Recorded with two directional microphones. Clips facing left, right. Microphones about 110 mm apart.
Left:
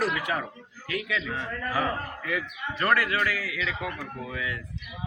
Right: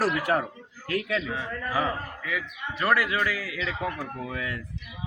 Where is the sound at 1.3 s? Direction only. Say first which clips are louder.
Right 1 dB; 10° right (ahead or behind).